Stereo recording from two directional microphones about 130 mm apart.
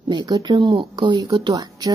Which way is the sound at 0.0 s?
35° right (ahead or behind).